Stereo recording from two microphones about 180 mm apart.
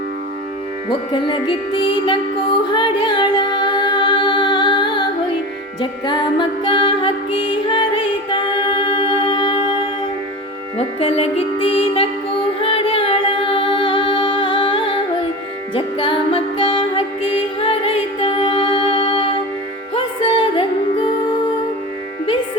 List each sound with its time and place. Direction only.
1.1 s music: 25° left (ahead or behind)
2.7 s female singing: 25° left (ahead or behind)
5.8 s music: 25° left (ahead or behind)
11.0 s music: 30° left (ahead or behind)